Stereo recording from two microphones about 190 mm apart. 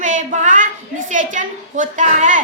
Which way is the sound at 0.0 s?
40° right (ahead or behind).